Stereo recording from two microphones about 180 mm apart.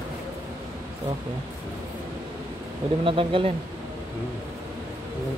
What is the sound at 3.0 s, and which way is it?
Speech, 30° right (ahead or behind).